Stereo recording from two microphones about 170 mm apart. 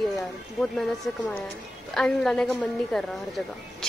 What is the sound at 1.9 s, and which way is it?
Speech, 5° left (ahead or behind).